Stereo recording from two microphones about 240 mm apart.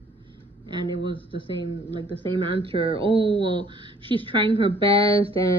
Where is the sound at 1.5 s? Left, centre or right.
Centre.